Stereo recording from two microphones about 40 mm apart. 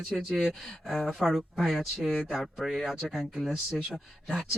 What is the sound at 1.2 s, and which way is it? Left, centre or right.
Speech, centre.